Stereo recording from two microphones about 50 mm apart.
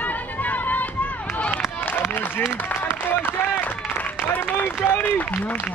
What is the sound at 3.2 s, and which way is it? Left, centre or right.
Run, left.